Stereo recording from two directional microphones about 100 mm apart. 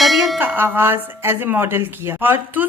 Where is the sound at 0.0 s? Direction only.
Centre (ahead or behind).